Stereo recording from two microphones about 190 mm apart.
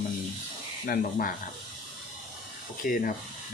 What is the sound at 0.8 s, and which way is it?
Speech, 50° left (ahead or behind).